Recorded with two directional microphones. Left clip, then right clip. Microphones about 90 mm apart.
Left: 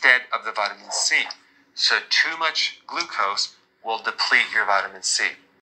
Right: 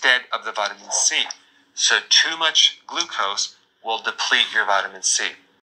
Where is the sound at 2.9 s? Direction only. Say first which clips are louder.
Right 1 dB; 25° right (ahead or behind).